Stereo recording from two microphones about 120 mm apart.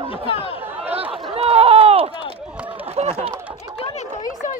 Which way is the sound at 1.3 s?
55° right (ahead or behind).